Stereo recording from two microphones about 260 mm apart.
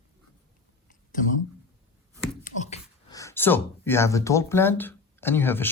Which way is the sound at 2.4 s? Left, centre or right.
Left.